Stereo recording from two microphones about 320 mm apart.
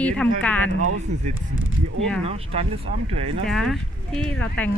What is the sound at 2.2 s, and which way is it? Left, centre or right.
Speech, centre.